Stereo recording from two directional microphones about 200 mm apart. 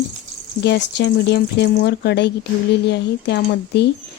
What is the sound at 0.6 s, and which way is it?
Speech, 55° left (ahead or behind).